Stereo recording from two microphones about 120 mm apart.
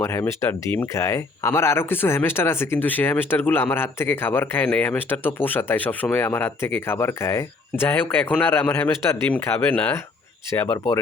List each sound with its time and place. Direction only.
0.0 s speech: 25° left (ahead or behind)